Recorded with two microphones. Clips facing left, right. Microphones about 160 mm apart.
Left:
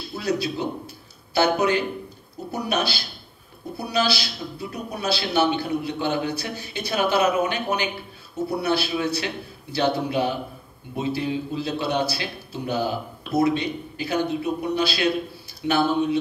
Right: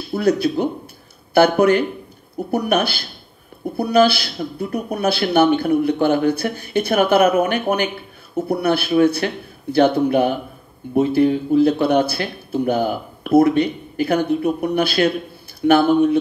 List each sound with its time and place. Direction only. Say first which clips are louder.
0.1 s speech: right 8 dB; 50° right (ahead or behind)